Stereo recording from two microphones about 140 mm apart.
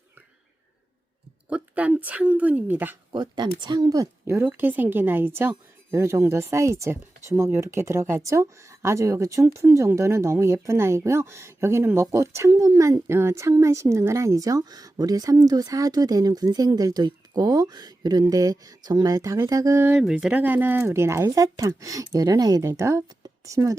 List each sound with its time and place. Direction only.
1.5 s a woman's voice: 10° right (ahead or behind)
3.1 s a woman's voice: 30° right (ahead or behind)